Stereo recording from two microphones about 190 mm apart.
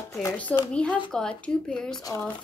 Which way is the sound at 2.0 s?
20° left (ahead or behind).